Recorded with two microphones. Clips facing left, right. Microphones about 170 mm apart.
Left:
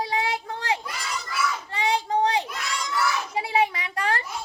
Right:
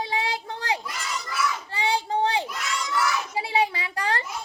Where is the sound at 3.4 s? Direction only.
30° right (ahead or behind).